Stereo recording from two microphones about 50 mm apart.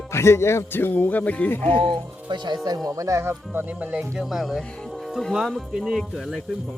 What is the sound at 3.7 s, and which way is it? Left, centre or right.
Speech, right.